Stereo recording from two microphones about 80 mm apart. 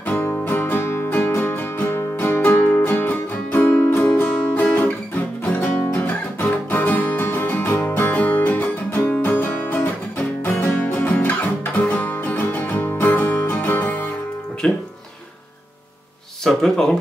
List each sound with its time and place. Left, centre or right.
0.0 s music: left; by 14.8 s centre
16.4 s speech: centre